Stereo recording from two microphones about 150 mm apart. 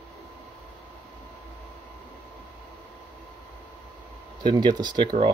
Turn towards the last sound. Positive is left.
turn(degrees=-30)  # may be behind; listen again after turning